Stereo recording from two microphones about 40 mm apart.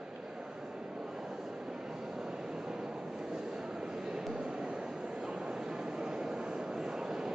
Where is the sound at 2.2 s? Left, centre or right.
Centre.